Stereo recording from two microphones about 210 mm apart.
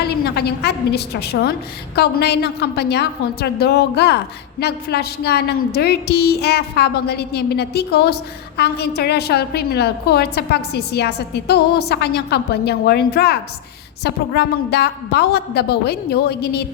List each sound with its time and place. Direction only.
0.0 s a woman's voice: 50° left (ahead or behind)